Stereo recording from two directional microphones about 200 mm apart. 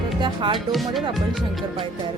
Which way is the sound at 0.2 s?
25° right (ahead or behind).